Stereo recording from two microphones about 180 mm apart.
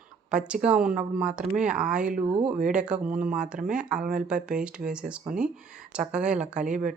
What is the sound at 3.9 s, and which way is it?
Speech, 45° right (ahead or behind).